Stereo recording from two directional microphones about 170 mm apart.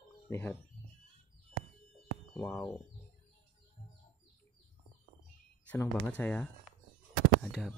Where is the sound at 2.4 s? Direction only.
10° left (ahead or behind).